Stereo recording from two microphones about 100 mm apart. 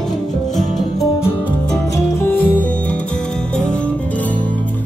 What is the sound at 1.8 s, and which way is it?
Music, 30° left (ahead or behind).